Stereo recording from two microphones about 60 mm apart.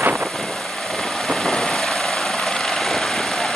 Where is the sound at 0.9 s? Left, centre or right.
Centre.